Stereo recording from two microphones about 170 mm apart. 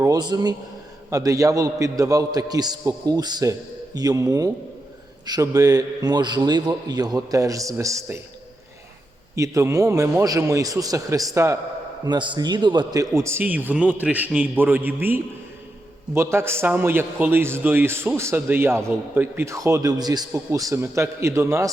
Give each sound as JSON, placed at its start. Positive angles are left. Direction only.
{"t": 0.0, "sound": "a man's voice", "side_deg": -25}
{"t": 9.3, "sound": "a man's voice", "side_deg": -20}
{"t": 12.0, "sound": "a man's voice", "side_deg": -25}